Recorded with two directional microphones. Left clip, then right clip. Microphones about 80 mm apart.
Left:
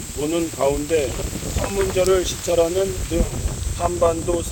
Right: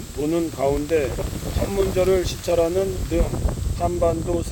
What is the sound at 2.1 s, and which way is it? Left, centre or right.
Speech, right.